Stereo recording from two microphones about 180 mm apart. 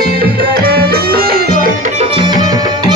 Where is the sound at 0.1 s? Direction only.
55° right (ahead or behind).